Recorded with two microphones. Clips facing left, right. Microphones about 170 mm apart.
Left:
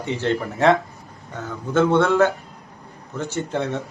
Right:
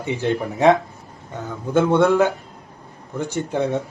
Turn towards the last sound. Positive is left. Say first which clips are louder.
# right 3 dB
turn(degrees=-15)  # may be behind; listen again after turning